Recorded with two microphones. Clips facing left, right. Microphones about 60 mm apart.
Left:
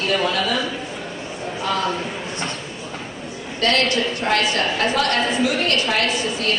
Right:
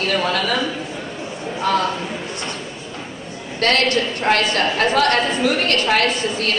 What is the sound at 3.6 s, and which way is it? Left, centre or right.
A woman's voice, right.